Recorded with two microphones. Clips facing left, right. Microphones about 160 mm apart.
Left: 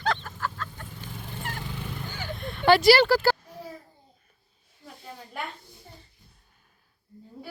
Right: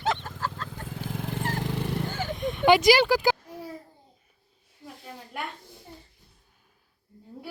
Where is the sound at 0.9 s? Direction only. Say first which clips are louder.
Right 7 dB; 90° right.